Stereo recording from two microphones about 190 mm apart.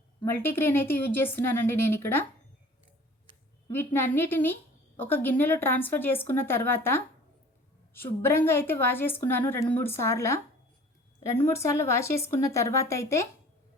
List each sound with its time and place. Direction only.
0.2 s a woman's voice: 10° left (ahead or behind)
3.7 s a woman's voice: 10° left (ahead or behind)